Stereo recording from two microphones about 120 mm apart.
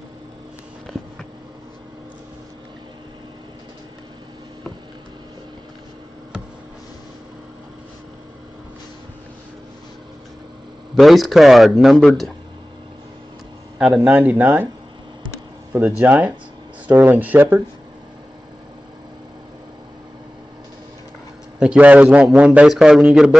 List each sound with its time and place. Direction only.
11.0 s speech: centre (ahead or behind)
13.7 s a man's voice: 5° right (ahead or behind)
16.0 s a man's voice: 15° right (ahead or behind)
21.5 s a man's voice: 10° right (ahead or behind)